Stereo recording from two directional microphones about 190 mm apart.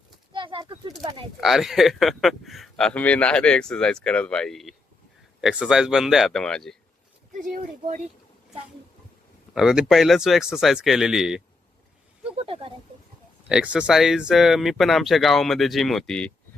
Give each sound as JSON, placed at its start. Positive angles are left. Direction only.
{"t": 0.3, "sound": "bird", "side_deg": -25}
{"t": 1.4, "sound": "speech", "side_deg": 0}
{"t": 7.5, "sound": "speech", "side_deg": -40}
{"t": 9.6, "sound": "speech", "side_deg": 0}
{"t": 12.4, "sound": "speech", "side_deg": -30}
{"t": 13.5, "sound": "speech", "side_deg": -5}